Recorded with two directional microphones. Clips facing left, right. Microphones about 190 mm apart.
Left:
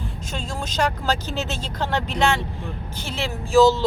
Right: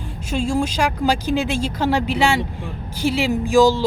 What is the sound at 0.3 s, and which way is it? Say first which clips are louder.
Speech: right 12 dB; 10° right (ahead or behind).